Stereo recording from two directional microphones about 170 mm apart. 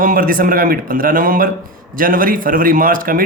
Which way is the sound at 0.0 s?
55° right (ahead or behind).